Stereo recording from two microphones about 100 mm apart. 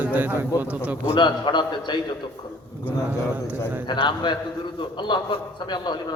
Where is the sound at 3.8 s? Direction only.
50° left (ahead or behind).